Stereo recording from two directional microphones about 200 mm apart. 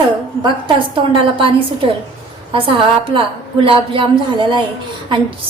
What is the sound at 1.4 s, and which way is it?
A woman's voice, 25° right (ahead or behind).